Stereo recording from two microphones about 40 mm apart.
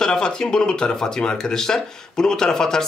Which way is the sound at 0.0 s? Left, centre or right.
Centre.